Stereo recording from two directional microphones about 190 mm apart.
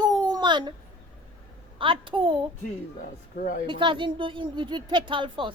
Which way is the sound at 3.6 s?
25° right (ahead or behind).